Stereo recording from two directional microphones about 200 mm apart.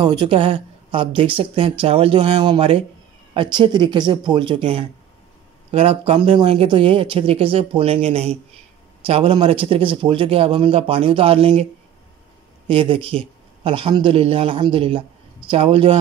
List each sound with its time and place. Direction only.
0.0 s speech: 20° right (ahead or behind)
12.6 s a man's voice: 25° right (ahead or behind)